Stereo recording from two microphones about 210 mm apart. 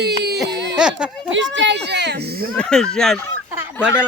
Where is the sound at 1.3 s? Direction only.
60° right (ahead or behind).